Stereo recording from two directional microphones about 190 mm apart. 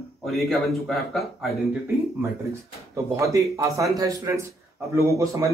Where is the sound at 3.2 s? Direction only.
15° right (ahead or behind).